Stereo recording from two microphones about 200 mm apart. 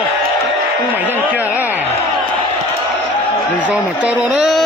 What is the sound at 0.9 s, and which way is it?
Speech, 10° right (ahead or behind).